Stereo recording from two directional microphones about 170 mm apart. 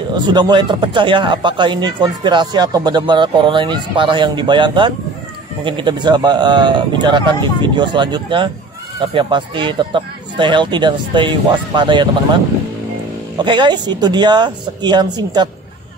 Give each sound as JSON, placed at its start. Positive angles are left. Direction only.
{"t": 0.1, "sound": "speech", "side_deg": -25}
{"t": 13.4, "sound": "speech", "side_deg": -25}